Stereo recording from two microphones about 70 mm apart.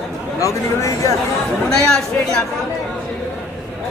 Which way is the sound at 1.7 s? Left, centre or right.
Centre.